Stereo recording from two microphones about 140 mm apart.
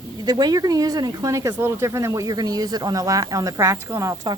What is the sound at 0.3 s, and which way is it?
A woman's voice, 30° right (ahead or behind).